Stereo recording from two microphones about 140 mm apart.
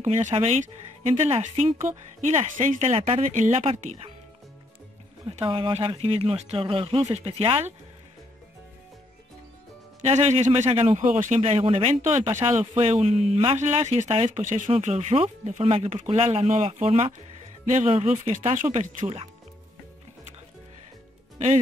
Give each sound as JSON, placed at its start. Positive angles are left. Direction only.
{"t": 0.0, "sound": "speech", "side_deg": -55}
{"t": 5.3, "sound": "speech", "side_deg": -40}
{"t": 10.0, "sound": "speech", "side_deg": -55}
{"t": 11.4, "sound": "speech", "side_deg": -45}
{"t": 13.6, "sound": "speech", "side_deg": -55}